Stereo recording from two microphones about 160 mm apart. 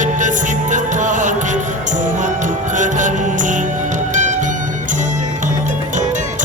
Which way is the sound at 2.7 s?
50° right (ahead or behind).